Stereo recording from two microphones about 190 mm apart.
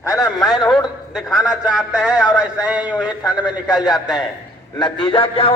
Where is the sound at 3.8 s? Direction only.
20° left (ahead or behind).